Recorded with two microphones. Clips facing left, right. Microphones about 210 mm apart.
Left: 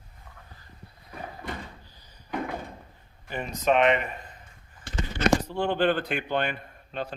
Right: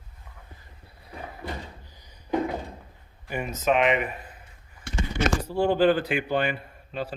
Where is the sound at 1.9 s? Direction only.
15° right (ahead or behind).